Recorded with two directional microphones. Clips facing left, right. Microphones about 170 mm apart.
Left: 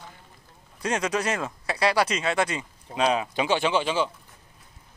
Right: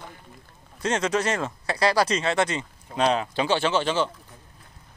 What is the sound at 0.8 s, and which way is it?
Speech, 25° right (ahead or behind).